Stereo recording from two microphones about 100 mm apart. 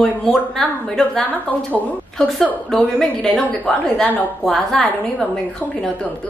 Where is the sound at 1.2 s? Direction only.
15° left (ahead or behind).